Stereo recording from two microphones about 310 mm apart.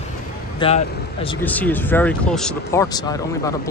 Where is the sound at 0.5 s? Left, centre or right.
Centre.